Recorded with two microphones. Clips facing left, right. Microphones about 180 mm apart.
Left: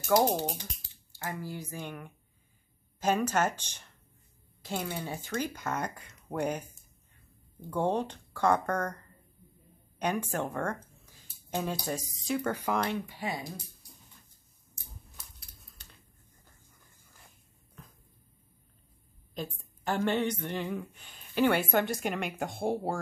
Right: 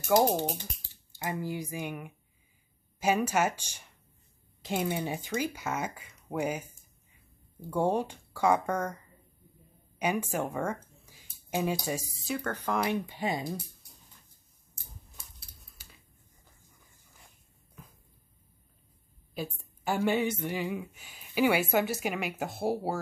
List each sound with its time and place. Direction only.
0.1 s speech: centre (ahead or behind)
1.1 s a woman's voice: 20° right (ahead or behind)
7.6 s a woman's voice: 10° right (ahead or behind)
9.9 s a sound: 5° right (ahead or behind)
11.8 s a woman's voice: 10° right (ahead or behind)
12.4 s speech: 10° left (ahead or behind)
12.9 s speech: 20° right (ahead or behind)
15.8 s finger snapping: 5° right (ahead or behind)
19.3 s a woman's voice: 10° right (ahead or behind)